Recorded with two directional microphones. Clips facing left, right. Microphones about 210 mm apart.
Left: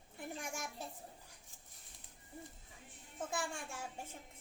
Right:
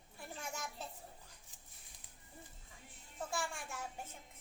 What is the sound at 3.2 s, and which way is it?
Speech, 20° left (ahead or behind).